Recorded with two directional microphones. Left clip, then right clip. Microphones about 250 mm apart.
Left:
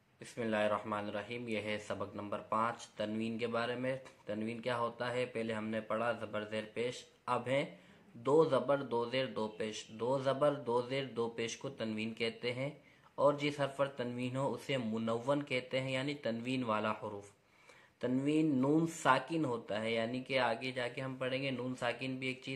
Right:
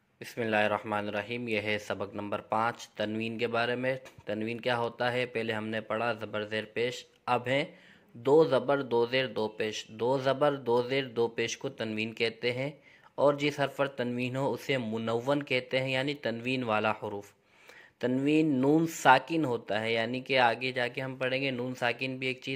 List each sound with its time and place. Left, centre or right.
0.2 s speech: right